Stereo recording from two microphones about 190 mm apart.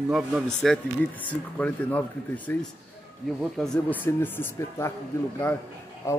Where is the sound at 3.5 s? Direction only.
5° left (ahead or behind).